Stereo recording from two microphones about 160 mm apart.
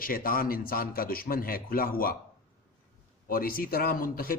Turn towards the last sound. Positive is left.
turn(degrees=65)  # may be behind; listen again after turning